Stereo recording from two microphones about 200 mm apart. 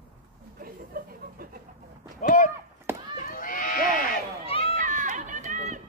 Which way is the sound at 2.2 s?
40° left (ahead or behind).